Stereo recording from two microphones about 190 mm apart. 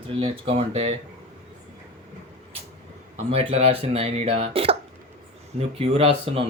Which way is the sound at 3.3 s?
30° right (ahead or behind).